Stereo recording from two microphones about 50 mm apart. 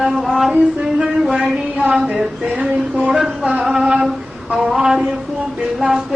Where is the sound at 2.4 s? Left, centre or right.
Right.